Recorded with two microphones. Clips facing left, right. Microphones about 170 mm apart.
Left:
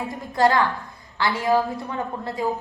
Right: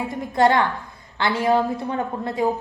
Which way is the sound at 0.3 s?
25° right (ahead or behind).